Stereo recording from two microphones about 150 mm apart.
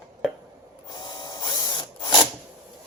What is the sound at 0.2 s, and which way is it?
Chopping, centre (ahead or behind).